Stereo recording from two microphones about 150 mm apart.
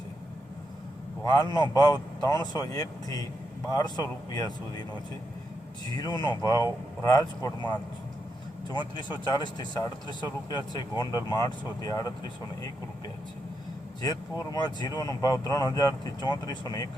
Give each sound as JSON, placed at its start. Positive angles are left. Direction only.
{"t": 1.2, "sound": "speech", "side_deg": 25}
{"t": 6.0, "sound": "speech", "side_deg": 30}
{"t": 8.7, "sound": "speech", "side_deg": 30}
{"t": 14.0, "sound": "speech", "side_deg": 25}